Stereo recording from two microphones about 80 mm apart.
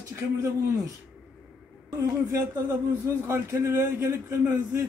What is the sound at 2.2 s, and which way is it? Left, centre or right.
A man's voice, right.